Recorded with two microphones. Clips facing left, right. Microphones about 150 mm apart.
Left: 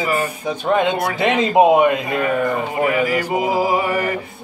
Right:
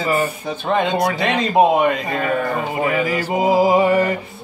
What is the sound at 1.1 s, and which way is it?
Speech, 20° left (ahead or behind).